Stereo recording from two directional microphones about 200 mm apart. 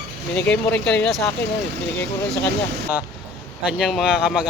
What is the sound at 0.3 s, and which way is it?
Speech, 5° left (ahead or behind).